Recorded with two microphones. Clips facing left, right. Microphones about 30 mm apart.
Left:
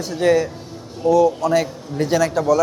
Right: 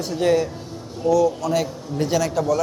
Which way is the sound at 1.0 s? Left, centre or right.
Centre.